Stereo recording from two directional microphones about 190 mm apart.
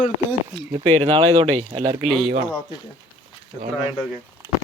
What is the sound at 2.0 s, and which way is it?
Speech, centre (ahead or behind).